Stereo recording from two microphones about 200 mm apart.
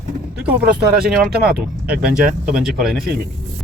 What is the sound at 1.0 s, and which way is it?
Speech, 5° right (ahead or behind).